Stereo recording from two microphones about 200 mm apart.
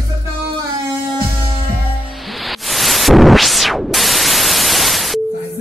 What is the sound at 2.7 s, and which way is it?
White noise, centre (ahead or behind).